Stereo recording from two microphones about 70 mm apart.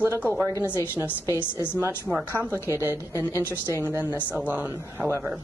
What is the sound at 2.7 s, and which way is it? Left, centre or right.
A woman's voice, right.